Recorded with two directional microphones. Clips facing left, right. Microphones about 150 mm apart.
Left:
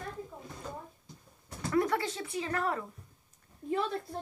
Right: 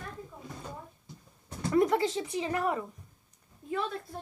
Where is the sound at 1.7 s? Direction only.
20° right (ahead or behind).